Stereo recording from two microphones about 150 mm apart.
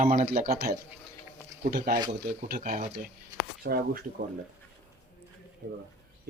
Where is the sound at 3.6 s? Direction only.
90° right.